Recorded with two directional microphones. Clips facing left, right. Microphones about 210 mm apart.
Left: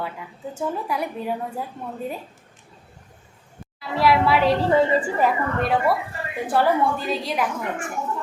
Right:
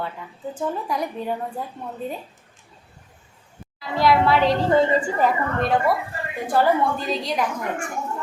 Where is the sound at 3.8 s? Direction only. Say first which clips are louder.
Right 1 dB; 5° left (ahead or behind).